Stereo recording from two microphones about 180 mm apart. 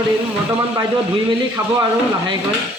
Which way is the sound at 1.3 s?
25° right (ahead or behind).